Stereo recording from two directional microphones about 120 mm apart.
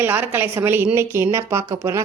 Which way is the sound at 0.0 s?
15° right (ahead or behind).